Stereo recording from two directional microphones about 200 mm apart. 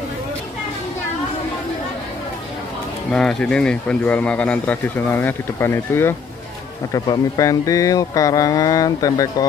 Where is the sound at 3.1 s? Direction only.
5° left (ahead or behind).